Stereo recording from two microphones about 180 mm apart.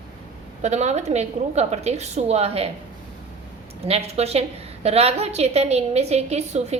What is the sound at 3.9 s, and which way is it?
A woman's voice, 35° right (ahead or behind).